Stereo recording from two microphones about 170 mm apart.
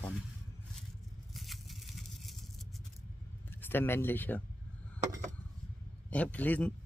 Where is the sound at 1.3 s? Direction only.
Centre (ahead or behind).